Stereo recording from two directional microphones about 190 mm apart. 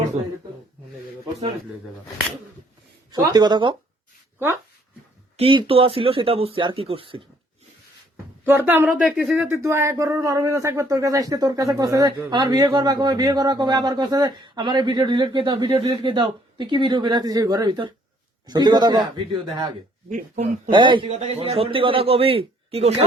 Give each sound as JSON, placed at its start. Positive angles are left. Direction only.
{"t": 3.1, "sound": "speech", "side_deg": -20}
{"t": 5.4, "sound": "speech", "side_deg": -30}
{"t": 8.4, "sound": "speech", "side_deg": -10}
{"t": 20.1, "sound": "speech", "side_deg": -45}
{"t": 20.7, "sound": "speech", "side_deg": -25}